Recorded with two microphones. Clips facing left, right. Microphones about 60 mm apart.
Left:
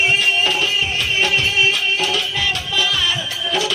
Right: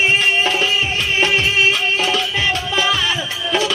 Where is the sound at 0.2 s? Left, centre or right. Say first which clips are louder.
Right 2 dB; right.